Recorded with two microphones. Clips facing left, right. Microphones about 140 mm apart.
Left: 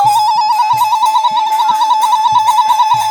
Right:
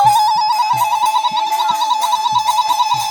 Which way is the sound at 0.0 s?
10° left (ahead or behind).